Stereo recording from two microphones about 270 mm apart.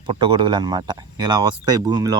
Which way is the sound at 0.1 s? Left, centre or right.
Centre.